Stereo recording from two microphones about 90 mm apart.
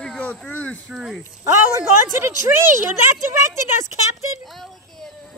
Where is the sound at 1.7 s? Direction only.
25° right (ahead or behind).